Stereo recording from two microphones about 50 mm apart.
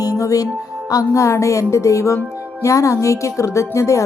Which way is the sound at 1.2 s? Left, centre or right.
Left.